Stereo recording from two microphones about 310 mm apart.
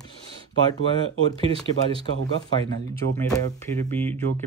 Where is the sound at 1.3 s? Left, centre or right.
Centre.